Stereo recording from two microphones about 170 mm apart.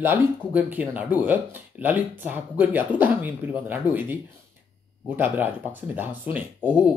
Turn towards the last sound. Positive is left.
turn(degrees=-10)  # may be behind; listen again after turning